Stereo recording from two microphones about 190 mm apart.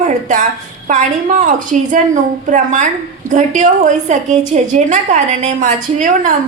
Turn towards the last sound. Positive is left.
turn(degrees=-40)  # may be behind; listen again after turning